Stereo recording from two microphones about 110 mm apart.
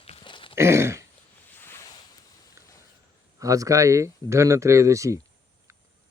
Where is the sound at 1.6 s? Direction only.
20° left (ahead or behind).